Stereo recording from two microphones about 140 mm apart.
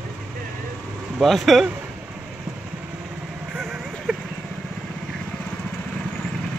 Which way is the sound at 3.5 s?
Centre (ahead or behind).